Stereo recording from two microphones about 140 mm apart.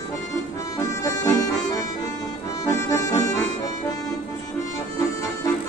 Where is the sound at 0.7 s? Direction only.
20° left (ahead or behind).